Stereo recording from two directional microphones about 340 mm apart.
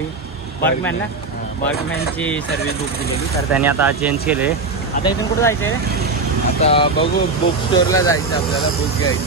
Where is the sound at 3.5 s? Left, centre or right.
Centre.